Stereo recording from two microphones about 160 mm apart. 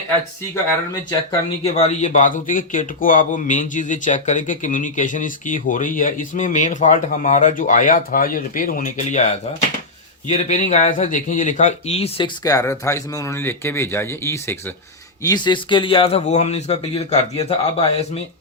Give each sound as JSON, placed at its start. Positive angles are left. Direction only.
{"t": 1.6, "sound": "speech", "side_deg": 40}
{"t": 12.4, "sound": "speech", "side_deg": 20}
{"t": 15.3, "sound": "a man's voice", "side_deg": 30}